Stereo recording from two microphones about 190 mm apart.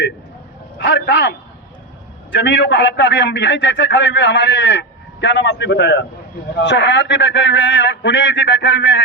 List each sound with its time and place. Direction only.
0.8 s a man's voice: 70° left (ahead or behind)